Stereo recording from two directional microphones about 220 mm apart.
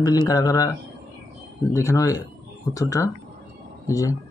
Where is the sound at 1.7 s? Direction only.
15° left (ahead or behind).